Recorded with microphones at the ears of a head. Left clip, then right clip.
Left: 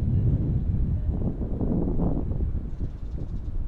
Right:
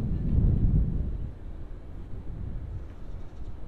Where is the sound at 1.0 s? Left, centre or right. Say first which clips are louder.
Left 12 dB; left.